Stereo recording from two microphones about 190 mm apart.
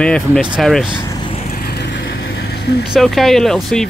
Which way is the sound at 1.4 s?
50° left (ahead or behind).